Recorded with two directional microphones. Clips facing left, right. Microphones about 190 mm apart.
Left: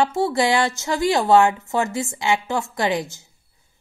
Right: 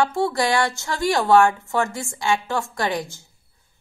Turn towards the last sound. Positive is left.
turn(degrees=20)  # may be behind; listen again after turning